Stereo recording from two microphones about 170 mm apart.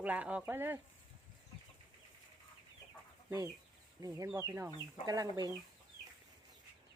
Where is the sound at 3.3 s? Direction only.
20° right (ahead or behind).